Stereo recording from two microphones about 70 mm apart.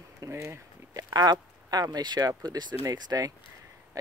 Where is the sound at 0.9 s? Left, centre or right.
Right.